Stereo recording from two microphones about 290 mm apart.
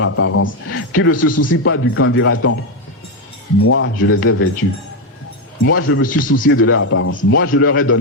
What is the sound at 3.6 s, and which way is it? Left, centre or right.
Speech, left.